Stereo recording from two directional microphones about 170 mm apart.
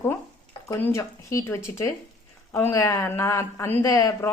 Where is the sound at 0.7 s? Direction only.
20° left (ahead or behind).